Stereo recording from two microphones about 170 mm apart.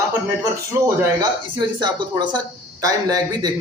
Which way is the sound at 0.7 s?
15° right (ahead or behind).